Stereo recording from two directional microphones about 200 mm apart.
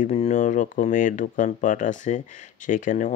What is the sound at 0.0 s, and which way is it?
Speech, 35° left (ahead or behind).